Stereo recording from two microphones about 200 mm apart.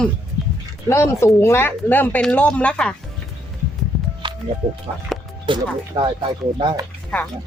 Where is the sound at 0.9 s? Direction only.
15° left (ahead or behind).